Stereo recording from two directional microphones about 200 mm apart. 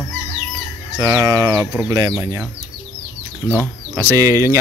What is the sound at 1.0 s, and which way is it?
Speech, 15° right (ahead or behind).